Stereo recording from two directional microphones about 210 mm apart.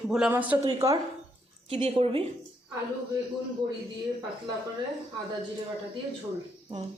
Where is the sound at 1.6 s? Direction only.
25° right (ahead or behind).